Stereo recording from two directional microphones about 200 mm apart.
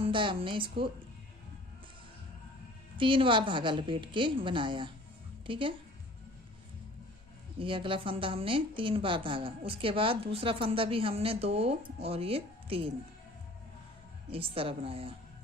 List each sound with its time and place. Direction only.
0.0 s a woman's voice: 25° right (ahead or behind)
3.0 s a woman's voice: 25° right (ahead or behind)
7.5 s a woman's voice: 25° right (ahead or behind)
14.3 s a woman's voice: 30° right (ahead or behind)